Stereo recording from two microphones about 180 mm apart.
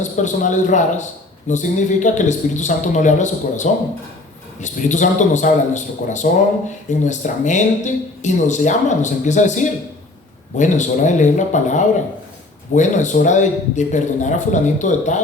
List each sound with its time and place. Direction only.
0.0 s speech: 40° left (ahead or behind)